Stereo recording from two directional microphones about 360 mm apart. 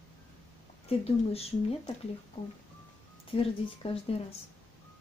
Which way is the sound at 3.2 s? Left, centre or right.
Centre.